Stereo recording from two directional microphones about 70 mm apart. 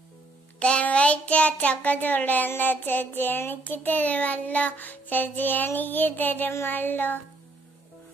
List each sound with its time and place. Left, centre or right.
0.6 s child singing: centre